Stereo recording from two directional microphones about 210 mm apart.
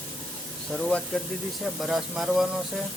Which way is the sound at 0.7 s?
Centre (ahead or behind).